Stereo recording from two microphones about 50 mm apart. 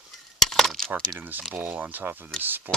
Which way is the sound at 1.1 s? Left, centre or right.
Right.